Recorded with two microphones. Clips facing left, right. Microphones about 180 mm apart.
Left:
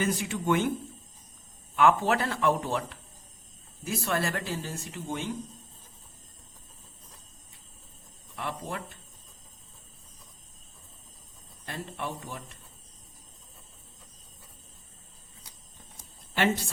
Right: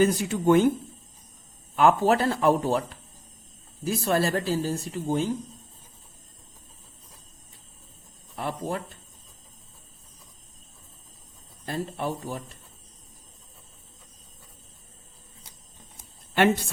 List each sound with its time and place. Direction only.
0.0 s speech: 40° right (ahead or behind)
1.7 s speech: 35° right (ahead or behind)
8.4 s speech: 35° right (ahead or behind)
11.6 s speech: 35° right (ahead or behind)